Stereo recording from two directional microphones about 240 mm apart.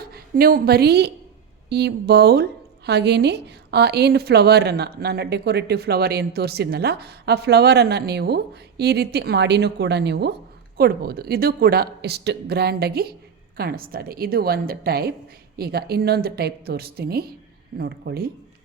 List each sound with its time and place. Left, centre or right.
0.0 s a woman's voice: right